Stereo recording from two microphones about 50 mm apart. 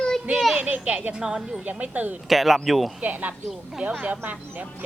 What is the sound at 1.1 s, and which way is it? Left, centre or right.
Speech, centre.